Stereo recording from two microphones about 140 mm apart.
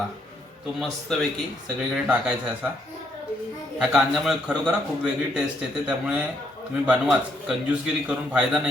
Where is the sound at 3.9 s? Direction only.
5° right (ahead or behind).